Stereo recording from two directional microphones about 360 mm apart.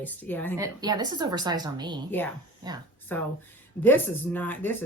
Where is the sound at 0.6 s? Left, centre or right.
Centre.